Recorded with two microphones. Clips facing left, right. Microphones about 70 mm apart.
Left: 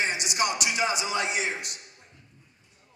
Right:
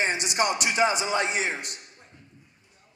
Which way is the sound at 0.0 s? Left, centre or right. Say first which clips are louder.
Right 2 dB; right.